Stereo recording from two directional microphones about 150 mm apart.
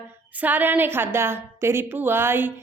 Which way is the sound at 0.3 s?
10° right (ahead or behind).